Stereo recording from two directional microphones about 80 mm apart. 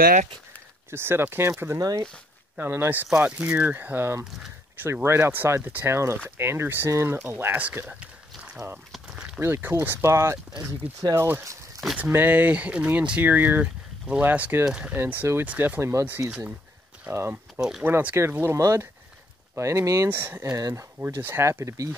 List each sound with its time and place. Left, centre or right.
0.8 s speech: right
1.8 s speech: right
2.7 s speech: right
7.8 s a sound: centre
9.4 s speech: right
12.0 s speech: right
15.0 s speech: right
15.8 s speech: right
17.1 s speech: right
17.6 s speech: centre
17.8 s speech: right
20.1 s speech: right